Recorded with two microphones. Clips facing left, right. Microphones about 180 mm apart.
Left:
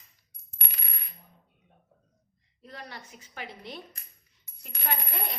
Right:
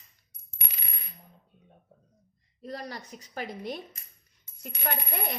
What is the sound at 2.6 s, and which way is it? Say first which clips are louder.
A woman's voice: right 6 dB; 40° right (ahead or behind).